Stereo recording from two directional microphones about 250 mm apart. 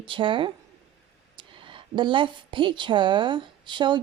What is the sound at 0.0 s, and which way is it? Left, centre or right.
A woman's voice, centre.